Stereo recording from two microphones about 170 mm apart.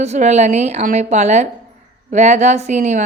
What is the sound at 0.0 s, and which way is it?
A woman's voice, 40° right (ahead or behind).